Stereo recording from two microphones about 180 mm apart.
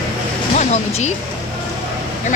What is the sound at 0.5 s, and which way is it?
Speech, 40° left (ahead or behind).